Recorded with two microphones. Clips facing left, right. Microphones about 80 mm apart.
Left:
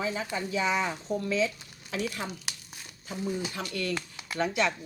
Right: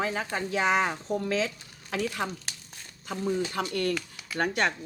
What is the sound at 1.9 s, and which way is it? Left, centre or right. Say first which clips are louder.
Speech: right 3 dB; right.